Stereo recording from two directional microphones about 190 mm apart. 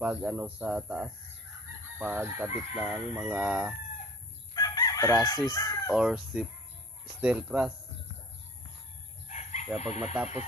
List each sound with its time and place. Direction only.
0.0 s chicken: 10° right (ahead or behind)
4.6 s crowing: 20° left (ahead or behind)
5.2 s speech: 20° left (ahead or behind)
5.9 s speech: 5° right (ahead or behind)
7.2 s chicken: 5° right (ahead or behind)
9.3 s chicken: 35° left (ahead or behind)
9.8 s speech: 35° left (ahead or behind)